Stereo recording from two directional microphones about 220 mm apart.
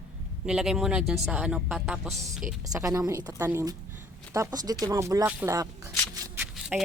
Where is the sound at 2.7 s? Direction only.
15° right (ahead or behind).